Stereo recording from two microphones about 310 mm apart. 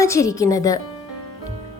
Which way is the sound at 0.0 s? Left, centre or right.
Centre.